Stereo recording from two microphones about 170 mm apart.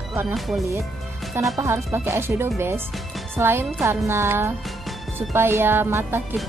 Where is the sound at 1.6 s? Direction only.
15° right (ahead or behind).